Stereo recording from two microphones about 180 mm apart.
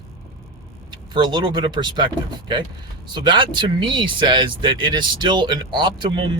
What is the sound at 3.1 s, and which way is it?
Speech, 25° right (ahead or behind).